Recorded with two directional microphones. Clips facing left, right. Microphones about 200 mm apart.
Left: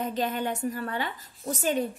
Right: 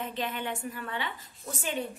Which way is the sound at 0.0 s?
40° left (ahead or behind).